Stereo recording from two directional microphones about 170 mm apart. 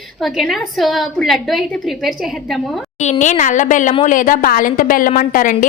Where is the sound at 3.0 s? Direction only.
45° left (ahead or behind).